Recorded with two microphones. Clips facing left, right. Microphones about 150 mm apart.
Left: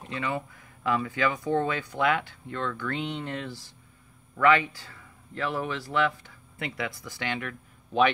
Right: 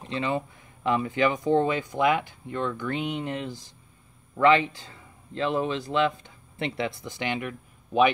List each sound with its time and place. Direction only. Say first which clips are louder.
0.1 s speech: right 4 dB; 25° right (ahead or behind)